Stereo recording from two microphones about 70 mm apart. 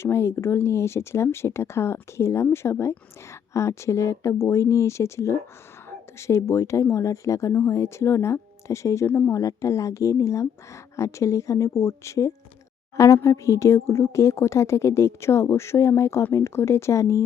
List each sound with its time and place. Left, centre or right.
0.0 s a woman's voice: left
9.0 s speech: left
9.3 s a woman's voice: left